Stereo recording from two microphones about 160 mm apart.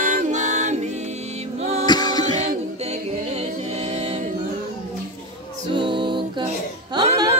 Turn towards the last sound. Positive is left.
turn(degrees=-25)  # may be behind; listen again after turning